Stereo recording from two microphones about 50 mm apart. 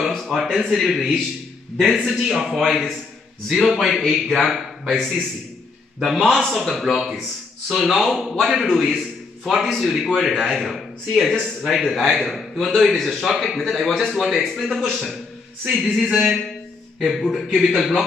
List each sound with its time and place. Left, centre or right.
0.1 s a sound: centre
0.6 s a man's voice: centre
17.6 s a man's voice: centre